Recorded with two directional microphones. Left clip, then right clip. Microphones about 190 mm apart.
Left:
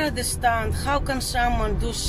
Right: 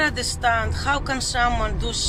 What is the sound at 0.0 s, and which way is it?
Speech, 25° left (ahead or behind).